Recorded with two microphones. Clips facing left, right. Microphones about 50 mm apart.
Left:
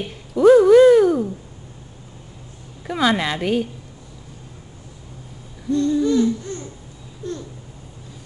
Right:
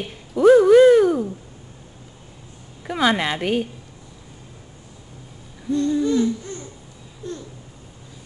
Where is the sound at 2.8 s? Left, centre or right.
Centre.